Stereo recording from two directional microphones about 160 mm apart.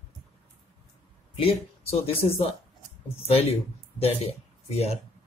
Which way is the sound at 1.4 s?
35° left (ahead or behind).